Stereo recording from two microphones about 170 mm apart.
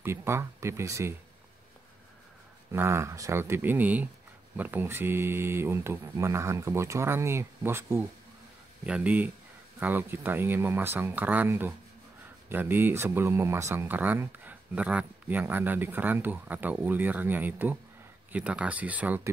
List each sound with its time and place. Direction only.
0.0 s speech: 15° right (ahead or behind)
2.7 s speech: 15° right (ahead or behind)